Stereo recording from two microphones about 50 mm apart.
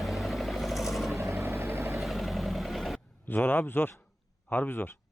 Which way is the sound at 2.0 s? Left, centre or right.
Centre.